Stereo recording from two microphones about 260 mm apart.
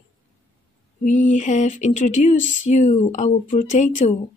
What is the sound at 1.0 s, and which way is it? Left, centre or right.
Speech, left.